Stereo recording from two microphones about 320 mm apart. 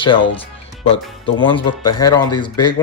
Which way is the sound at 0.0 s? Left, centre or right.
Centre.